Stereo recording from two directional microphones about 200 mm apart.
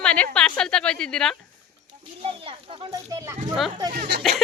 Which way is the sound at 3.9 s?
55° right (ahead or behind).